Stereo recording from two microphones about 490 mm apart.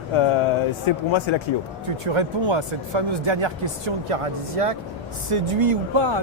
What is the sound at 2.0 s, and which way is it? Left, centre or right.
Speech, right.